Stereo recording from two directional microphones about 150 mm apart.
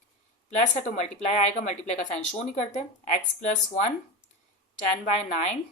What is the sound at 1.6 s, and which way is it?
A woman's voice, 50° left (ahead or behind).